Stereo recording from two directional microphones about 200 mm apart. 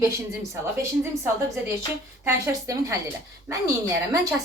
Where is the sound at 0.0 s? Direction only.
15° right (ahead or behind).